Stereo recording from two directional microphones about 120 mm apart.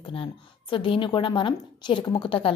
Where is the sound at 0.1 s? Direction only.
45° left (ahead or behind).